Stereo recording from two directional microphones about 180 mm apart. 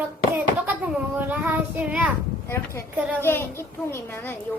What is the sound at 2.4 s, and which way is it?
A child's voice, 15° left (ahead or behind).